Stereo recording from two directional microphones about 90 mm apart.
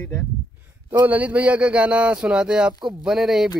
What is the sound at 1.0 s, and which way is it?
Speech, 15° right (ahead or behind).